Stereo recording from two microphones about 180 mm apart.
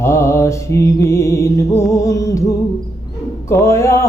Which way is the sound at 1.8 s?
15° left (ahead or behind).